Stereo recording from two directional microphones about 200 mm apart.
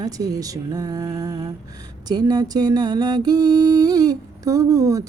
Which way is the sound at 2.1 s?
20° right (ahead or behind).